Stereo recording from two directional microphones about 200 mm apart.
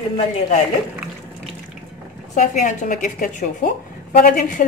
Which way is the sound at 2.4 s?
40° left (ahead or behind).